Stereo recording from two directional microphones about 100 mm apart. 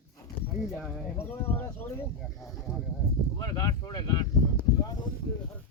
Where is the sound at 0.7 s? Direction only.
Centre (ahead or behind).